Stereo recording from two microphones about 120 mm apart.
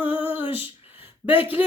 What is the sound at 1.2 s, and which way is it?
Speech, 10° right (ahead or behind).